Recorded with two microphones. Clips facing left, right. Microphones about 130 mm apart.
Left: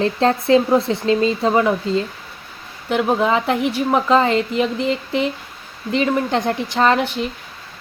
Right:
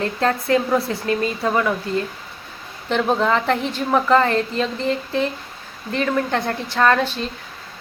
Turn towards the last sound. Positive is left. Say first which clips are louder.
# left 1 dB
turn(degrees=15)  # may be behind; listen again after turning